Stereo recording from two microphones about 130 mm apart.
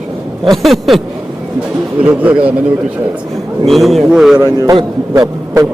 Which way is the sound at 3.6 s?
Centre (ahead or behind).